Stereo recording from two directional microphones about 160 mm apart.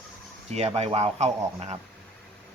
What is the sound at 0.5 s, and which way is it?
Speech, 40° right (ahead or behind).